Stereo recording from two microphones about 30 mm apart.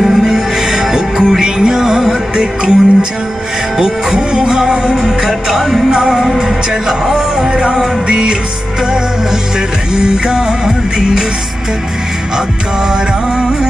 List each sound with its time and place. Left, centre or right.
0.1 s music: centre
5.2 s music: centre
5.9 s music: right
7.4 s music: right
9.9 s music: right